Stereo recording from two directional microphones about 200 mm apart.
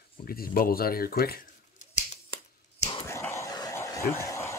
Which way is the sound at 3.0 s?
15° left (ahead or behind).